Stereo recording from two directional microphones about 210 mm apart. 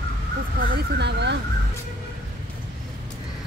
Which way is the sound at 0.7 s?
55° right (ahead or behind).